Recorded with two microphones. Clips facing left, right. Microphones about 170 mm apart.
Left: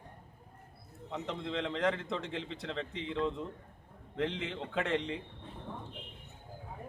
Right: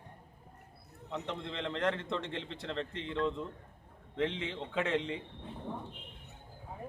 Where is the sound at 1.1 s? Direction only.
Centre (ahead or behind).